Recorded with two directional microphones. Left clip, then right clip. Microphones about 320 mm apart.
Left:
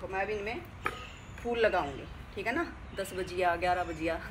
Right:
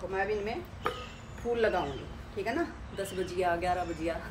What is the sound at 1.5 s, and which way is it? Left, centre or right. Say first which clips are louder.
Speech: even; centre.